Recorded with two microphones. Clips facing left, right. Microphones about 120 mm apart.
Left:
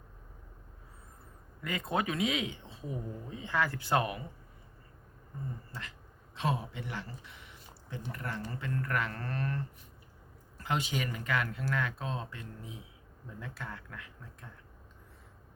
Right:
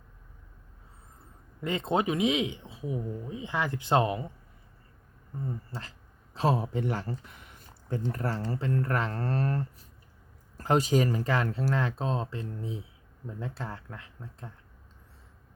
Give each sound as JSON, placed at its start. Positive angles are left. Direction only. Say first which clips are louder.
{"t": 1.6, "sound": "speech", "louder": "right 5 dB", "side_deg": -25}
{"t": 5.7, "sound": "speech", "louder": "right 4 dB", "side_deg": -25}
{"t": 8.1, "sound": "speech", "louder": "right 7 dB", "side_deg": -35}